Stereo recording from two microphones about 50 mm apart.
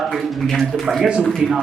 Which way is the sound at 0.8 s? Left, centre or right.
Centre.